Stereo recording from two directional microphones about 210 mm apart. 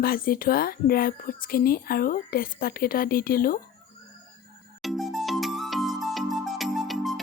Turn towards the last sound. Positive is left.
turn(degrees=0)  # may be behind; listen again after turning